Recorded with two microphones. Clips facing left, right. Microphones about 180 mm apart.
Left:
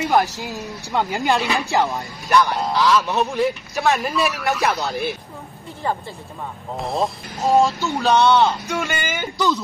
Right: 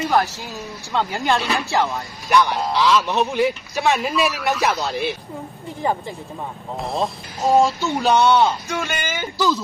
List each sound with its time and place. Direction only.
0.0 s speech: 15° left (ahead or behind)
2.5 s speech: centre (ahead or behind)
5.8 s speech: 15° right (ahead or behind)
6.8 s speech: centre (ahead or behind)